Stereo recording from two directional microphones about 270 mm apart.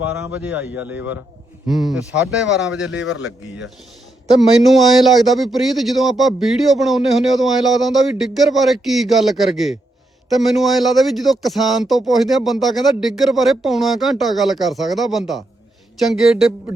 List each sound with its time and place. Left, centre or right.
0.0 s speech: centre
2.9 s speech: left
4.4 s speech: centre